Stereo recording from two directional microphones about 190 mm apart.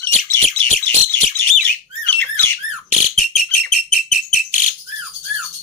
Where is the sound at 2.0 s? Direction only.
10° left (ahead or behind).